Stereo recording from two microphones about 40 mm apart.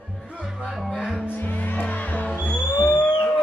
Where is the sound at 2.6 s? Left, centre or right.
Left.